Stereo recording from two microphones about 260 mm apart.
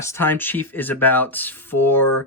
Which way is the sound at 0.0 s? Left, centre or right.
Centre.